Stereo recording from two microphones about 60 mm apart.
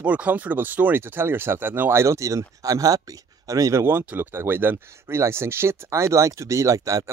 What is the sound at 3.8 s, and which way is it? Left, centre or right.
Speech, right.